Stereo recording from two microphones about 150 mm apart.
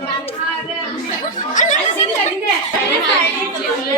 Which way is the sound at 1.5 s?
55° left (ahead or behind).